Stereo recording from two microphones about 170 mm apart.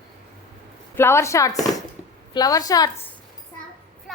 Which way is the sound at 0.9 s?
15° left (ahead or behind).